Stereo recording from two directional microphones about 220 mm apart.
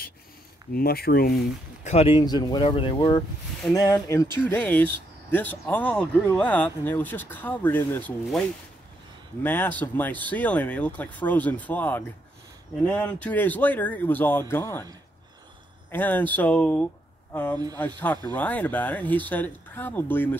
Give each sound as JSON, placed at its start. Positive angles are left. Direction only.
{"t": 0.7, "sound": "speech", "side_deg": 45}
{"t": 1.9, "sound": "speech", "side_deg": 25}
{"t": 15.9, "sound": "speech", "side_deg": 10}